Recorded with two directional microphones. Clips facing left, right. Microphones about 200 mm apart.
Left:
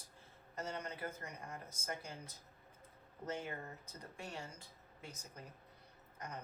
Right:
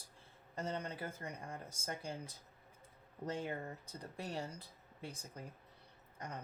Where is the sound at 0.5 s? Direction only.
30° right (ahead or behind).